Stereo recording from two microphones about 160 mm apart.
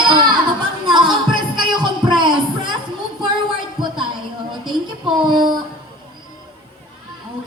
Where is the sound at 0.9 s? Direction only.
30° right (ahead or behind).